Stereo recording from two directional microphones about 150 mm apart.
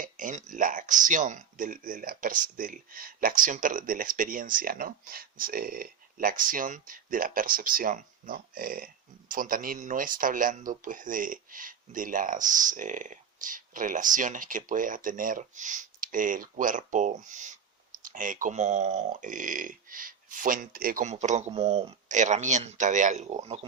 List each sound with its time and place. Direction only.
0.0 s speech: 60° right (ahead or behind); by 23.6 s 45° right (ahead or behind)